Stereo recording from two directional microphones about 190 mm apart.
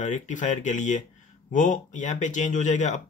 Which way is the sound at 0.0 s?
40° left (ahead or behind).